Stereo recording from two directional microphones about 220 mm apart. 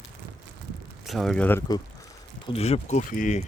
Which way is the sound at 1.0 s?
Centre (ahead or behind).